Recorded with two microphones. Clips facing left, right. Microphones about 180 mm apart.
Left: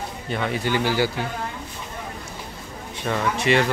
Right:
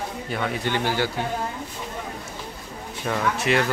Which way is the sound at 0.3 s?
5° left (ahead or behind).